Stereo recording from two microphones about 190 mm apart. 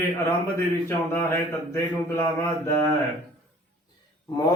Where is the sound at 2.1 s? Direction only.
15° left (ahead or behind).